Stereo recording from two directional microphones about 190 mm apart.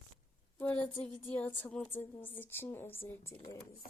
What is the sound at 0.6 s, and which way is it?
Speech, 10° left (ahead or behind).